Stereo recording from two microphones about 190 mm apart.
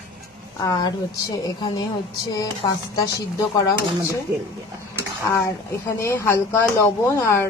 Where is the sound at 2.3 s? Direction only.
20° left (ahead or behind).